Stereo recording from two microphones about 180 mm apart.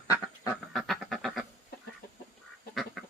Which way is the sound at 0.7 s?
Centre (ahead or behind).